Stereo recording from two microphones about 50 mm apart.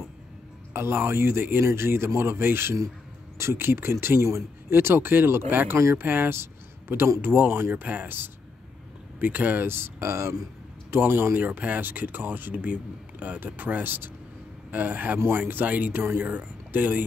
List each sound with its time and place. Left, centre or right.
0.7 s speech: right
1.6 s speech: right
6.3 s a sound: right
7.2 s speech: right
9.7 s speech: right
11.1 s speech: right
11.3 s speech: right